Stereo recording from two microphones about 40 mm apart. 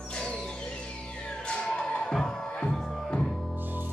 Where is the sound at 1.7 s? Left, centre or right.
Left.